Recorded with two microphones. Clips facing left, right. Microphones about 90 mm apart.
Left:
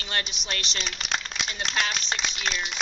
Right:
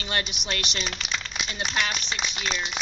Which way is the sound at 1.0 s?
60° left (ahead or behind).